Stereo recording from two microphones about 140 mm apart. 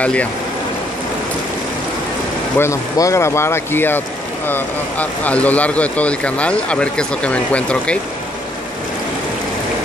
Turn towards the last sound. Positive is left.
turn(degrees=10)  # may be behind; listen again after turning